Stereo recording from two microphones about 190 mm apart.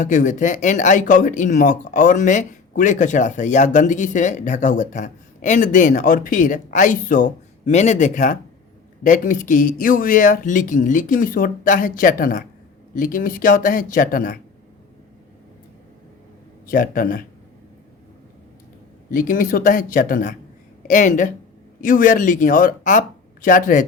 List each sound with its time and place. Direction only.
0.0 s speech: 45° left (ahead or behind)
16.6 s speech: 45° left (ahead or behind)
19.1 s speech: 45° left (ahead or behind)